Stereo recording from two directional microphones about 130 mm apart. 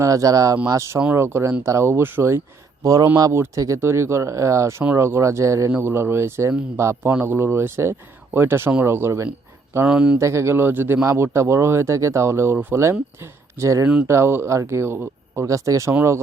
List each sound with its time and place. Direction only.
0.0 s speech: 25° right (ahead or behind)
9.8 s speech: 10° right (ahead or behind)
10.2 s speech: 20° right (ahead or behind)
13.8 s speech: 10° right (ahead or behind)
14.1 s speech: 20° right (ahead or behind)